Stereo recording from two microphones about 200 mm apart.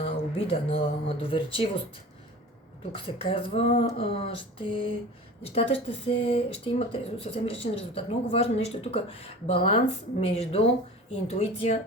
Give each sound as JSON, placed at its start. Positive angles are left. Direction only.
{"t": 0.0, "sound": "speech", "side_deg": 30}
{"t": 2.9, "sound": "a woman's voice", "side_deg": 25}